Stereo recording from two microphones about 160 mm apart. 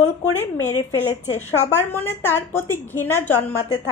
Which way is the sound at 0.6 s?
15° left (ahead or behind).